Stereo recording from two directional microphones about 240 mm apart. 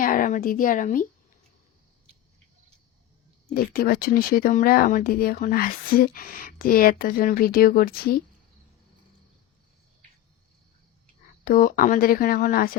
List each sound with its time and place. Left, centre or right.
0.0 s speech: left
3.5 s speech: left
11.4 s speech: left